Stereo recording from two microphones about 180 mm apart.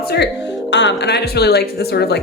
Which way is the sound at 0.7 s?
75° left (ahead or behind).